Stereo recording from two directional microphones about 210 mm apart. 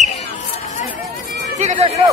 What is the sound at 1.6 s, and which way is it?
Speech, 35° right (ahead or behind).